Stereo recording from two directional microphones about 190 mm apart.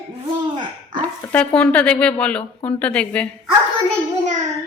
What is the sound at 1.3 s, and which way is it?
Speech, 5° left (ahead or behind).